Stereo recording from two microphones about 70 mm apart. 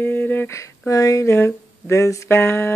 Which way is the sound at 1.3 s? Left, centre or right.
Left.